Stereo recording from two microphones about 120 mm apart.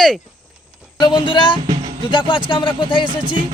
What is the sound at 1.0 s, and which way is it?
Speech, 40° left (ahead or behind).